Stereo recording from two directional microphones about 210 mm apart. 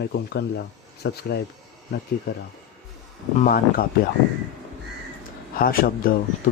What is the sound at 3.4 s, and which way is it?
Speech, 45° left (ahead or behind).